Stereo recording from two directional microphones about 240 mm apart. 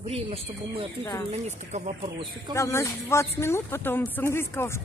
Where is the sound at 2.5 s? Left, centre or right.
Centre.